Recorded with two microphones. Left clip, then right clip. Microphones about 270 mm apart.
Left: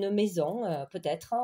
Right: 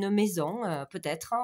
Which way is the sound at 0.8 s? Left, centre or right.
Right.